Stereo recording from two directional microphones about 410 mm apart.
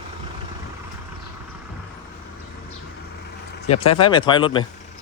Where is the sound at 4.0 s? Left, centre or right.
Centre.